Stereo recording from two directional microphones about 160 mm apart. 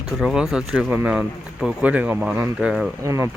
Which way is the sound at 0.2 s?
Centre (ahead or behind).